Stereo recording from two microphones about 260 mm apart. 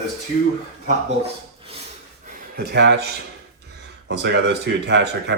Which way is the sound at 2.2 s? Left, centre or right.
Right.